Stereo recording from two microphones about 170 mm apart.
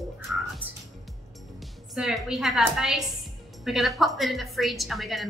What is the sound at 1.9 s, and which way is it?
A woman's voice, centre (ahead or behind).